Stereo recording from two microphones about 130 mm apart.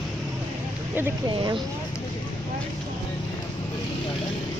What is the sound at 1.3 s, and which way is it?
Speech, 35° right (ahead or behind).